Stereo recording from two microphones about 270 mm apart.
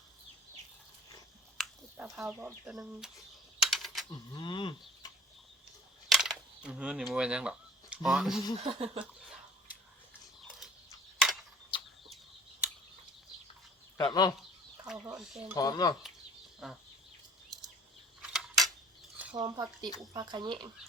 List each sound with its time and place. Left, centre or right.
1.5 s speech: centre
3.6 s typing: centre
4.1 s speech: centre
6.1 s a sound: centre
7.1 s speech: centre
8.5 s a sound: right
11.7 s chicken: centre
12.0 s chicken: centre
14.0 s speech: centre
14.8 s speech: centre
15.5 s speech: centre
16.6 s speech: centre
18.2 s a sound: centre
19.1 s speech: centre